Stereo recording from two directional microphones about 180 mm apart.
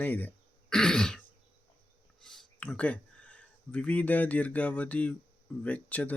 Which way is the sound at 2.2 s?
5° left (ahead or behind).